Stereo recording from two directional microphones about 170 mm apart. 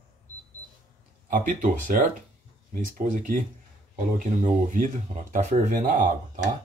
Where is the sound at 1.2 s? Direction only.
55° right (ahead or behind).